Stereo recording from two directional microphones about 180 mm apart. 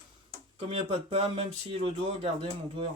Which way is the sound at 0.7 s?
30° right (ahead or behind).